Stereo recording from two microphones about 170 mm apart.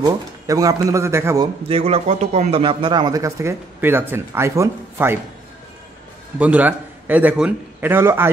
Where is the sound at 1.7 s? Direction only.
35° right (ahead or behind); by 5.2 s 15° right (ahead or behind).